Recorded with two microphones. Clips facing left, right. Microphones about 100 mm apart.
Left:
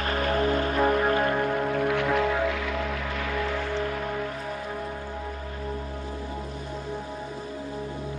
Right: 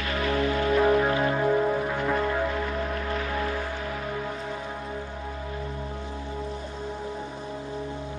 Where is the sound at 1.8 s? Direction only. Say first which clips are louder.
Left 2 dB; 85° left.